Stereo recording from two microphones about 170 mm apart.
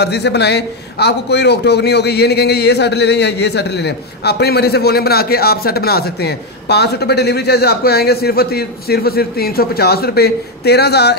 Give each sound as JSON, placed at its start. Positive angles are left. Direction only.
{"t": 0.0, "sound": "a man's voice", "side_deg": 80}